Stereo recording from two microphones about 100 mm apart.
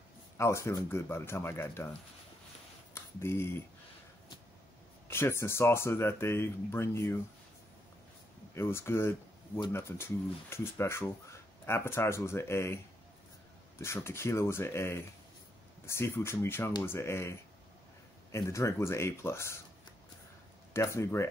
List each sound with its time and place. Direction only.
0.4 s speech: 30° left (ahead or behind)
2.9 s speech: 25° left (ahead or behind)
5.0 s speech: 25° left (ahead or behind)
8.5 s speech: 25° left (ahead or behind)
20.7 s speech: 30° left (ahead or behind)